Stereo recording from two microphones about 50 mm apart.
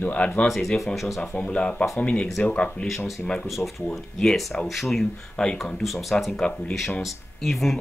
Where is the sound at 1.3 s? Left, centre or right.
Left.